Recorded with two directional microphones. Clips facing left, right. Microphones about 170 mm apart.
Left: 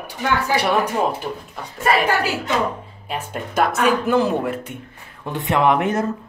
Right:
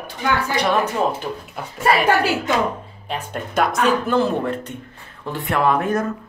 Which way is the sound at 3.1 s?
5° left (ahead or behind).